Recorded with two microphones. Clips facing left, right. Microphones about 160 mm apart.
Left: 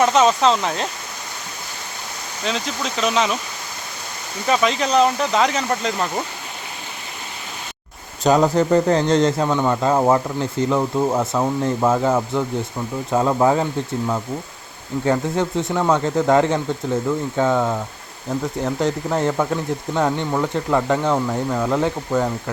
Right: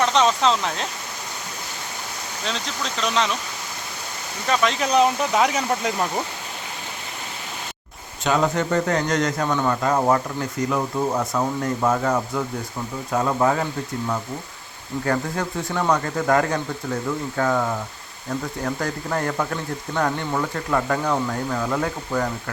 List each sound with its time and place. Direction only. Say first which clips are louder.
0.0 s speech: left 4 dB; 5° left (ahead or behind)
2.4 s speech: left 5 dB; 5° left (ahead or behind)
4.4 s speech: left 3 dB; 5° left (ahead or behind)
4.9 s speech: left 1 dB; 10° right (ahead or behind)
8.2 s a man's voice: left 5 dB; 35° left (ahead or behind)
15.0 s a man's voice: left 5 dB; 20° left (ahead or behind)